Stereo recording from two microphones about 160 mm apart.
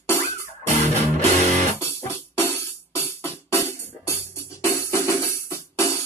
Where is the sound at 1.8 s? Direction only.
15° left (ahead or behind).